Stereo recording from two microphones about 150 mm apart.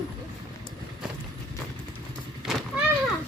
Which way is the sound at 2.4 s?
Centre (ahead or behind).